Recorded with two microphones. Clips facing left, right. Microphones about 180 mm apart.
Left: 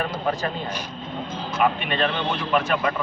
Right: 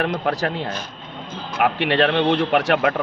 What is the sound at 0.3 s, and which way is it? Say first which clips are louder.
Speech: right 3 dB; 75° right (ahead or behind).